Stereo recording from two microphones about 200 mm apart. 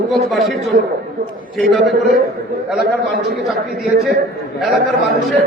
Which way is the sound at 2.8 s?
55° right (ahead or behind).